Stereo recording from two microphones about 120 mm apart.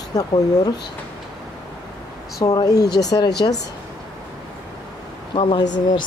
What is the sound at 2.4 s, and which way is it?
Speech, 35° left (ahead or behind).